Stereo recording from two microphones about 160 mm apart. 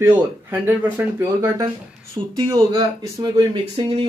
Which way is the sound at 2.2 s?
35° right (ahead or behind).